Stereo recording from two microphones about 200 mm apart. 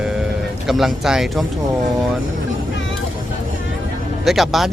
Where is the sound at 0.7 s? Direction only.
Centre (ahead or behind).